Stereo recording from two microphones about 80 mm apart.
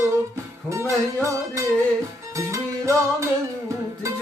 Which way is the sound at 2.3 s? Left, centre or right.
Right.